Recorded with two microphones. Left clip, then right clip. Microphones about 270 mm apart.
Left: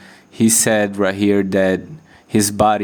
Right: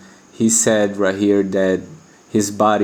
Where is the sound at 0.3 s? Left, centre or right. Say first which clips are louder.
Even; left.